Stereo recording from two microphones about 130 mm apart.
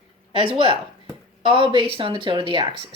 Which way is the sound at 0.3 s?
45° right (ahead or behind).